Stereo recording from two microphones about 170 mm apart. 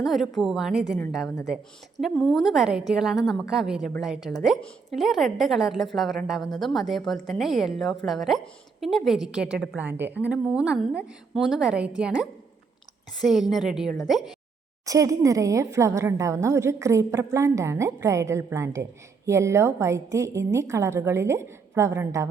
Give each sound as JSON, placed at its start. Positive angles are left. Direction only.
{"t": 0.0, "sound": "a woman's voice", "side_deg": 0}
{"t": 2.0, "sound": "a woman's voice", "side_deg": 0}
{"t": 14.8, "sound": "a woman's voice", "side_deg": -20}